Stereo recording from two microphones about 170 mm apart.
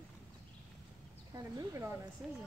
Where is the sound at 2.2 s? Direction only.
Centre (ahead or behind).